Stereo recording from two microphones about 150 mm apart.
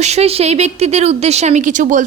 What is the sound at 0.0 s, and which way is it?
A woman's voice, 45° right (ahead or behind).